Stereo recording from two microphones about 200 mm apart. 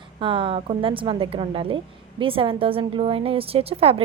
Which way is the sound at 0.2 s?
25° right (ahead or behind).